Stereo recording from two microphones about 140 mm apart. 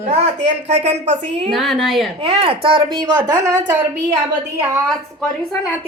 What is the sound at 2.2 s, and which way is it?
Speech, 45° right (ahead or behind).